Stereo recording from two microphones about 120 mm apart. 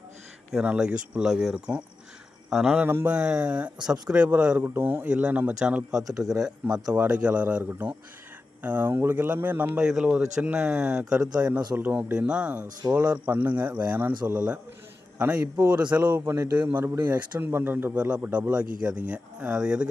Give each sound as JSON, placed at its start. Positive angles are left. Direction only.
{"t": 0.5, "sound": "a man's voice", "side_deg": -10}
{"t": 2.8, "sound": "a man's voice", "side_deg": -15}
{"t": 3.2, "sound": "a man's voice", "side_deg": -5}
{"t": 6.0, "sound": "a man's voice", "side_deg": -30}
{"t": 6.9, "sound": "a man's voice", "side_deg": -10}
{"t": 15.5, "sound": "a man's voice", "side_deg": -35}
{"t": 15.8, "sound": "a man's voice", "side_deg": -10}
{"t": 16.1, "sound": "a man's voice", "side_deg": -25}